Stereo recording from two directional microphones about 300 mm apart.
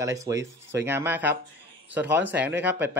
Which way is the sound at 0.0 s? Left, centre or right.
Centre.